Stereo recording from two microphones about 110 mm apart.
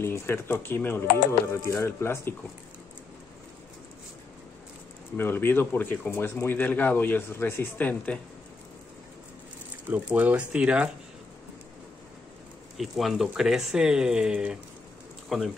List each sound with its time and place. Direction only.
0.0 s speech: 25° left (ahead or behind)
5.1 s speech: 20° left (ahead or behind)
9.8 s speech: 15° right (ahead or behind)
12.7 s speech: centre (ahead or behind)